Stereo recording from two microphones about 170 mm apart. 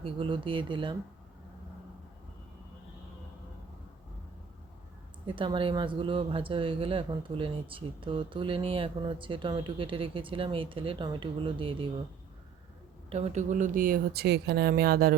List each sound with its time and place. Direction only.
0.0 s speech: 30° right (ahead or behind)
5.2 s speech: 30° right (ahead or behind)
13.1 s speech: 40° right (ahead or behind); by 15.1 s 60° right (ahead or behind)